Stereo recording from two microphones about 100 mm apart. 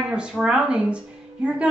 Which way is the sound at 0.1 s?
5° right (ahead or behind).